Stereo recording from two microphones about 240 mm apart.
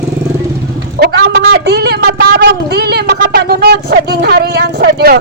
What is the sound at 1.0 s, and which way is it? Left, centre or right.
A woman's voice, right.